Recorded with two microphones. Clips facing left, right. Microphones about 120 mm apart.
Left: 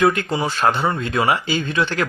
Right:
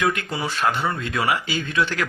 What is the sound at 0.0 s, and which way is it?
Speech, 30° left (ahead or behind).